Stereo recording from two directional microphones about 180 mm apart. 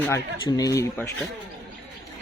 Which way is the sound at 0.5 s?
20° left (ahead or behind).